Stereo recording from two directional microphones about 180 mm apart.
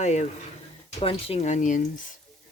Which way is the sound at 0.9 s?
35° left (ahead or behind).